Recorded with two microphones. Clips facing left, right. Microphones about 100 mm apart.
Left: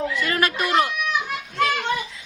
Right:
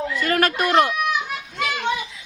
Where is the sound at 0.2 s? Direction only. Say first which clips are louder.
Right 6 dB; 45° right (ahead or behind).